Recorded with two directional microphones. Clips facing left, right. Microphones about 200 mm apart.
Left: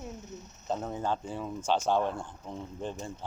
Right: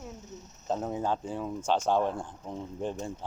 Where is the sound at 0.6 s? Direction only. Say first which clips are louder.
Right 2 dB; 5° right (ahead or behind).